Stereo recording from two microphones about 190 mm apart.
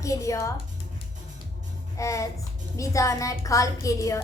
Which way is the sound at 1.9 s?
15° left (ahead or behind).